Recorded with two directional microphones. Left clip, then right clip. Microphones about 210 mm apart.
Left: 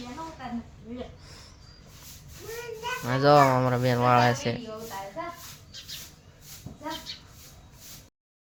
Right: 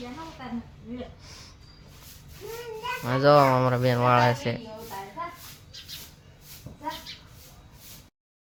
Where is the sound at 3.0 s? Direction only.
Centre (ahead or behind).